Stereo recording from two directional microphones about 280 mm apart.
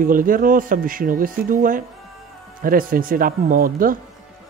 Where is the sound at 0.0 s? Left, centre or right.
Right.